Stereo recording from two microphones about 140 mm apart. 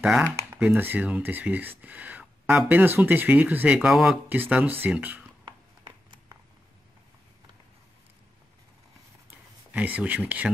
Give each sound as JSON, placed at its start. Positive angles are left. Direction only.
{"t": 0.0, "sound": "speech", "side_deg": -10}
{"t": 5.4, "sound": "a sound", "side_deg": -30}
{"t": 9.7, "sound": "speech", "side_deg": -10}